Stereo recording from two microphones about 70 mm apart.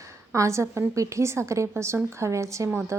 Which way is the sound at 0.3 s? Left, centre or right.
Right.